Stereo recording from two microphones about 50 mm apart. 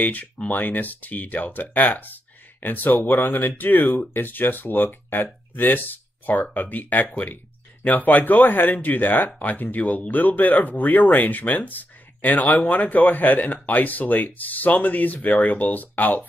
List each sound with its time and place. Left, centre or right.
0.0 s speech: left